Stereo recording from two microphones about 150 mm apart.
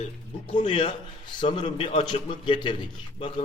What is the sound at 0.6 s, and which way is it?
A man's voice, 35° left (ahead or behind).